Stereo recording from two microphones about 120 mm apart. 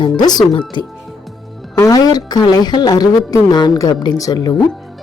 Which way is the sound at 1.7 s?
30° left (ahead or behind).